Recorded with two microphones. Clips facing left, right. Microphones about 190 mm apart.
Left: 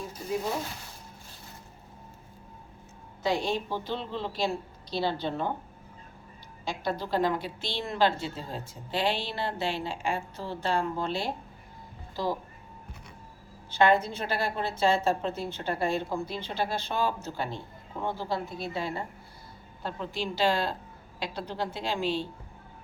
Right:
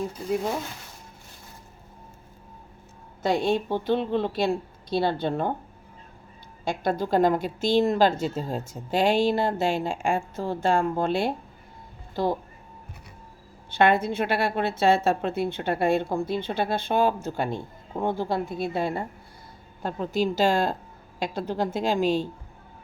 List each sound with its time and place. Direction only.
3.2 s a woman's voice: 55° right (ahead or behind)
6.7 s a woman's voice: 50° right (ahead or behind)
13.7 s a woman's voice: 60° right (ahead or behind)
19.8 s a woman's voice: 45° right (ahead or behind)